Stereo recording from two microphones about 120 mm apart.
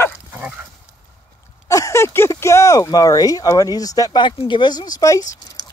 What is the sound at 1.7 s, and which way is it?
Speech, 25° left (ahead or behind).